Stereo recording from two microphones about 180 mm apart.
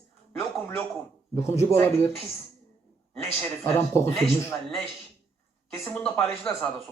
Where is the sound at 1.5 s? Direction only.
15° left (ahead or behind).